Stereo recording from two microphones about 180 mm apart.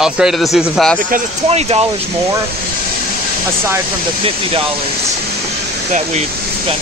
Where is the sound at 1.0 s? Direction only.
50° right (ahead or behind).